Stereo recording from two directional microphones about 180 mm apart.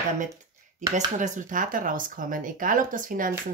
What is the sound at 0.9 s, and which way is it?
Speech, 45° right (ahead or behind).